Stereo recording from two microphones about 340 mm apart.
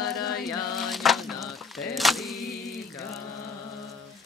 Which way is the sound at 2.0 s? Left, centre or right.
Centre.